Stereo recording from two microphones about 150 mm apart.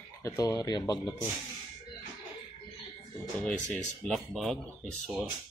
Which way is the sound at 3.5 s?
10° left (ahead or behind).